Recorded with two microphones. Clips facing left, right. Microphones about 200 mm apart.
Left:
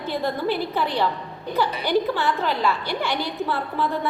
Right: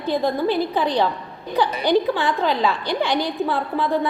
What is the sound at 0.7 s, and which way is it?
A woman's voice, 15° right (ahead or behind).